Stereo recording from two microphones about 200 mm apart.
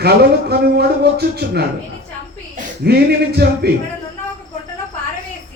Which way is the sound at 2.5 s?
50° right (ahead or behind).